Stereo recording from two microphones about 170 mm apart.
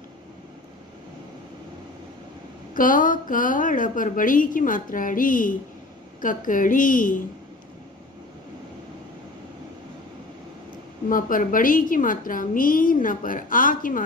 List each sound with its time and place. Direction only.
2.7 s a woman's voice: 55° left (ahead or behind)
11.1 s a woman's voice: 55° left (ahead or behind)